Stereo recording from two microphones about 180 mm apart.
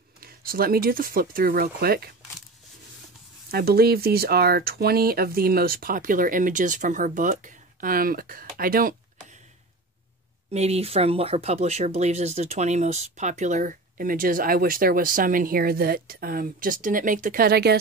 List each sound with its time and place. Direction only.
0.2 s speech: 55° right (ahead or behind)
3.5 s speech: 60° right (ahead or behind)
10.5 s speech: 35° right (ahead or behind); by 17.7 s 60° right (ahead or behind)